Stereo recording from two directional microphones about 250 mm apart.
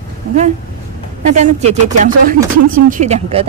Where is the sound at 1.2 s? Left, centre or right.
Right.